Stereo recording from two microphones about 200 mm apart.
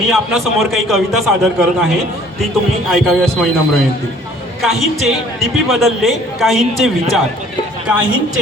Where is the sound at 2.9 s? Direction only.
Centre (ahead or behind).